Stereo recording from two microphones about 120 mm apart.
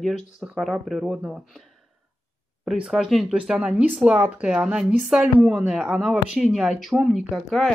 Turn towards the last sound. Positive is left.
turn(degrees=0)  # may be behind; listen again after turning